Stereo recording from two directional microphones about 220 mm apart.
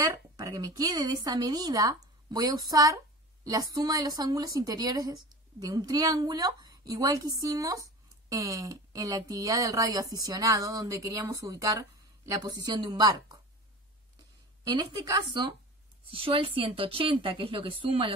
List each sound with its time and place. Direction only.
0.0 s a woman's voice: 15° right (ahead or behind)
14.6 s speech: 20° right (ahead or behind)